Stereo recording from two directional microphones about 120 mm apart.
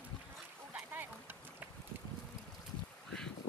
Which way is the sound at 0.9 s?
15° right (ahead or behind).